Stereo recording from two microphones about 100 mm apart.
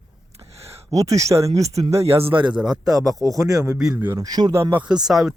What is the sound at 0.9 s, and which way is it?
Speech, 35° right (ahead or behind).